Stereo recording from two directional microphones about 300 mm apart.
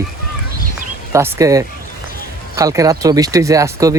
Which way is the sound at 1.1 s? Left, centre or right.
Centre.